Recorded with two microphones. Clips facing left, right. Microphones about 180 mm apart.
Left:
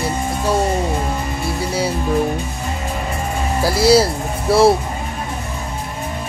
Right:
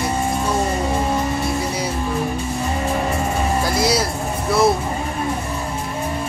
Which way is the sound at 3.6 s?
30° left (ahead or behind).